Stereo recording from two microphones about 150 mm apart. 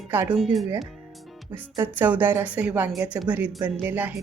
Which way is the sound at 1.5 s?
15° right (ahead or behind).